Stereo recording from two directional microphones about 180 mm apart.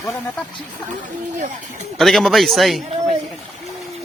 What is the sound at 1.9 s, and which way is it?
Speech, centre (ahead or behind).